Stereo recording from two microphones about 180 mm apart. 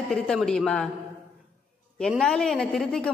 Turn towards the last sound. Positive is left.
turn(degrees=5)  # may be behind; listen again after turning